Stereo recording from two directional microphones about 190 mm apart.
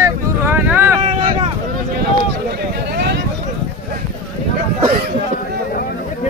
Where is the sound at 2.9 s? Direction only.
60° right (ahead or behind).